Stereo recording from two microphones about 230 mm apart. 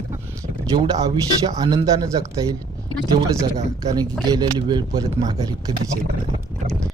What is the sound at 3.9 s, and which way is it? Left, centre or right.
Speech, centre.